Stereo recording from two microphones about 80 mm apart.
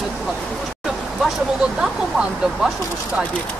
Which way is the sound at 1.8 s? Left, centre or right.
Centre.